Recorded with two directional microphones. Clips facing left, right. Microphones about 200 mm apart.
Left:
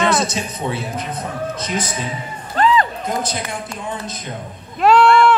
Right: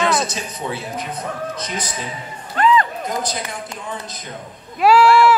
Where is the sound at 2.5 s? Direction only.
35° left (ahead or behind).